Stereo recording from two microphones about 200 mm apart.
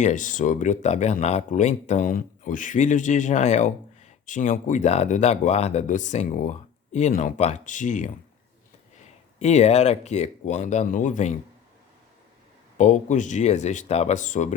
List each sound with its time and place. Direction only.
0.0 s speech: 40° left (ahead or behind)
9.4 s speech: 35° left (ahead or behind)
12.7 s speech: 35° left (ahead or behind)